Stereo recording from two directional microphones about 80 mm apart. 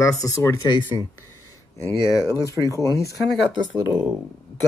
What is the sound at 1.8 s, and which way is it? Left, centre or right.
Speech, left.